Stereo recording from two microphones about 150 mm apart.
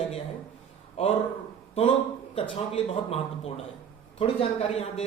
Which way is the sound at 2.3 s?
40° left (ahead or behind).